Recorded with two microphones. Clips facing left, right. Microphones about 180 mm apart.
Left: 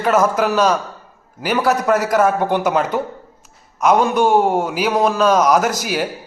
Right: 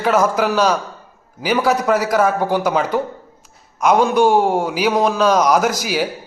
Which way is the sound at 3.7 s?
Centre (ahead or behind).